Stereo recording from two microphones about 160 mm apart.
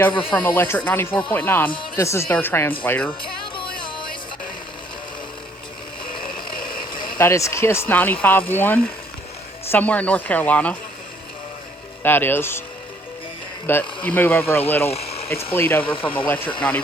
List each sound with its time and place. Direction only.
0.2 s speech: 10° left (ahead or behind)
3.5 s music: 30° left (ahead or behind)
7.2 s speech: 15° left (ahead or behind)
12.0 s speech: 15° left (ahead or behind)
13.7 s speech: 10° left (ahead or behind)
14.8 s a sound: 40° left (ahead or behind)
15.5 s speech: 15° left (ahead or behind)
15.8 s speech: 35° left (ahead or behind)
16.2 s speech: 10° left (ahead or behind)